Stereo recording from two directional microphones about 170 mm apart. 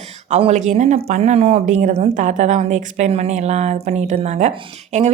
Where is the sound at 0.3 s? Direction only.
40° right (ahead or behind).